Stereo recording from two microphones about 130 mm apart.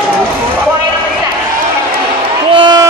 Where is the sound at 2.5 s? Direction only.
35° right (ahead or behind).